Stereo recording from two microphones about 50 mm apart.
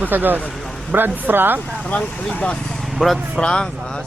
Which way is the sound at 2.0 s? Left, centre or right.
Centre.